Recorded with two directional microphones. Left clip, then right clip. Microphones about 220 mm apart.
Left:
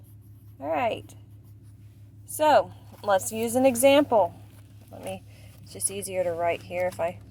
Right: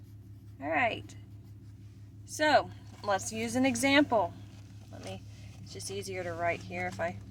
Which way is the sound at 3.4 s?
30° left (ahead or behind).